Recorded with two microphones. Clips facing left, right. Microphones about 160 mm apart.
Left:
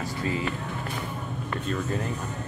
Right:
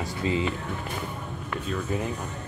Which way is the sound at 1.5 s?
Centre (ahead or behind).